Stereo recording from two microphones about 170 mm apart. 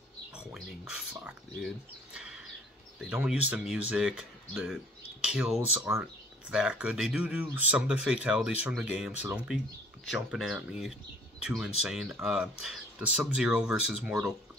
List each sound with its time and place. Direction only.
0.4 s speech: 5° right (ahead or behind)
2.1 s a sound: 5° right (ahead or behind)
3.0 s speech: 5° right (ahead or behind)